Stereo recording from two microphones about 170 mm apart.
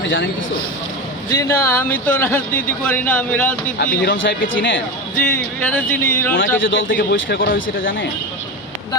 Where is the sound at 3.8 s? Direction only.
55° left (ahead or behind).